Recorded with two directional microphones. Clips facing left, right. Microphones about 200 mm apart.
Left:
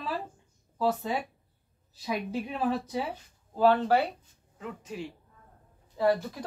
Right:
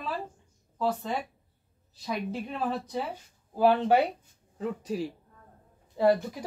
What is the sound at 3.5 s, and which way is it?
Speech, 15° right (ahead or behind).